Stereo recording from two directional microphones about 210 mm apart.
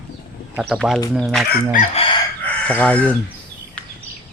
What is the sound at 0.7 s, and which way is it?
Speech, centre (ahead or behind).